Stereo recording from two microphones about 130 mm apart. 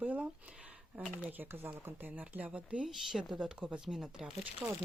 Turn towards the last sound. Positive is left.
turn(degrees=-5)  # may be behind; listen again after turning